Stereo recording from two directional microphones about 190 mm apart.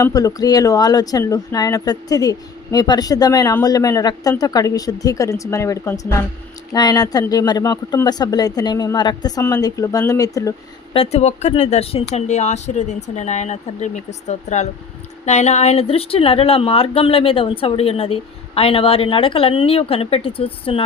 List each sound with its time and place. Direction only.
0.0 s speech: 20° left (ahead or behind)
10.9 s speech: 30° left (ahead or behind)